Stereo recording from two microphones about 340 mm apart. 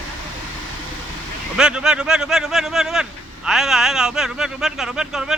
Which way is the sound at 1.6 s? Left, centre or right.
Centre.